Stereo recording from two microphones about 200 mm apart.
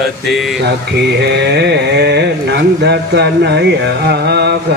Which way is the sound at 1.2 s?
55° right (ahead or behind).